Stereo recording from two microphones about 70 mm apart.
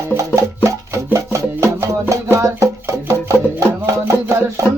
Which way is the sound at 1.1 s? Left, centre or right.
Right.